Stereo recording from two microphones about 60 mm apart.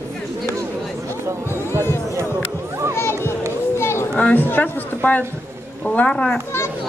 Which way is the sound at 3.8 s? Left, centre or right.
Left.